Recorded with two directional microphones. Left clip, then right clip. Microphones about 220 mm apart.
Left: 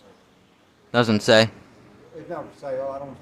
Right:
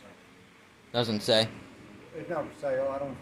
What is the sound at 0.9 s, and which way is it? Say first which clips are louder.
Speech: left 9 dB; 35° left (ahead or behind).